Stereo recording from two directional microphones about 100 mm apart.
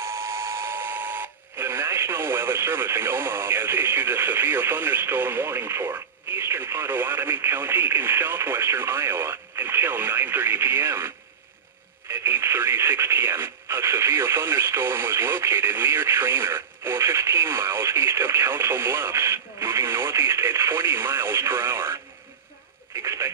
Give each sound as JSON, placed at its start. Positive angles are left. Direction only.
{"t": 0.0, "sound": "speech", "side_deg": -30}
{"t": 23.0, "sound": "speech", "side_deg": -30}